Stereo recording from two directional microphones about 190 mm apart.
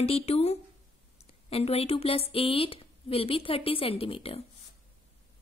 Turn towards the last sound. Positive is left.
turn(degrees=30)  # may be behind; listen again after turning